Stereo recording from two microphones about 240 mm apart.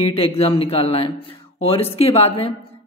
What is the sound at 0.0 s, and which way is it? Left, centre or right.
A woman's voice, left.